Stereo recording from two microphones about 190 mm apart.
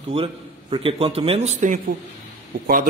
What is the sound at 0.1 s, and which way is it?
A man's voice, 25° right (ahead or behind).